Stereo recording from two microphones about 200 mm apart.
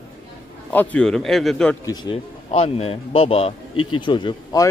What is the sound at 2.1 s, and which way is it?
A man's voice, 30° left (ahead or behind).